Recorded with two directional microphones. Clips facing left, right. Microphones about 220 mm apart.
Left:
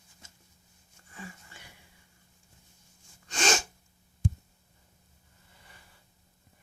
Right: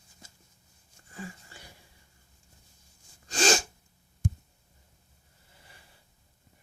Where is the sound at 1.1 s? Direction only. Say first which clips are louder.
Right 4 dB; 35° right (ahead or behind).